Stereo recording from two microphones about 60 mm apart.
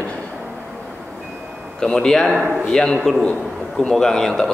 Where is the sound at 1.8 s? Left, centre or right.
Centre.